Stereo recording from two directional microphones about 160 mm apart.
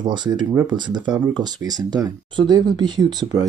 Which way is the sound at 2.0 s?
25° right (ahead or behind).